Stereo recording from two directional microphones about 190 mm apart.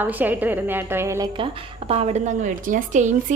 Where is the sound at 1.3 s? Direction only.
30° right (ahead or behind).